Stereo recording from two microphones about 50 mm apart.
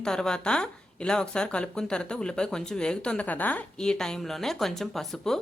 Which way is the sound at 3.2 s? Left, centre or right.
Left.